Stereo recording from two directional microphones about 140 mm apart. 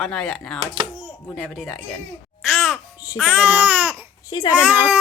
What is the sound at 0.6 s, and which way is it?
Speech, 35° right (ahead or behind).